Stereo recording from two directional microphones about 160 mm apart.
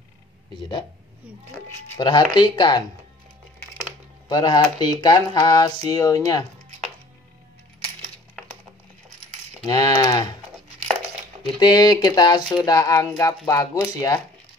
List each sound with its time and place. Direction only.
2.0 s speech: 25° left (ahead or behind)
4.3 s speech: 25° left (ahead or behind)
9.7 s speech: 25° left (ahead or behind)
11.6 s speech: 25° left (ahead or behind)